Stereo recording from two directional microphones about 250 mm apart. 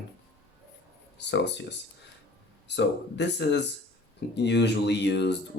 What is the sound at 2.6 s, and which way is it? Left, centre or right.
Speech, left.